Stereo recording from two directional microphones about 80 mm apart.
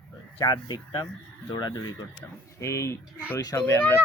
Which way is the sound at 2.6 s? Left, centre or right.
Left.